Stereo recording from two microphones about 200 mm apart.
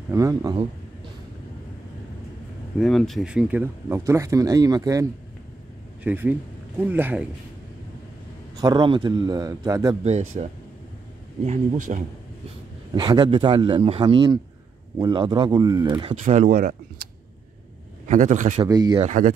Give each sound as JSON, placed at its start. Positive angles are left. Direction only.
{"t": 0.1, "sound": "speech", "side_deg": -15}
{"t": 2.8, "sound": "speech", "side_deg": 0}
{"t": 6.0, "sound": "speech", "side_deg": -10}
{"t": 8.5, "sound": "speech", "side_deg": -20}
{"t": 10.4, "sound": "speech", "side_deg": -35}
{"t": 12.9, "sound": "speech", "side_deg": -25}
{"t": 16.1, "sound": "speech", "side_deg": -35}
{"t": 18.0, "sound": "speech", "side_deg": -40}
{"t": 18.7, "sound": "speech", "side_deg": -20}
{"t": 19.0, "sound": "speech", "side_deg": -40}